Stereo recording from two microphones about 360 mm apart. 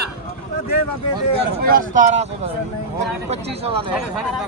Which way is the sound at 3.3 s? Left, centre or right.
Centre.